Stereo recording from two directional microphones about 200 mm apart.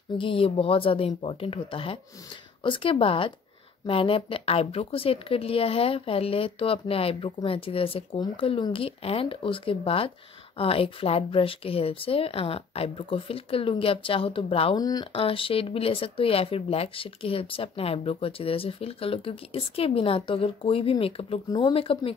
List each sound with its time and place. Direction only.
0.2 s speech: 25° left (ahead or behind)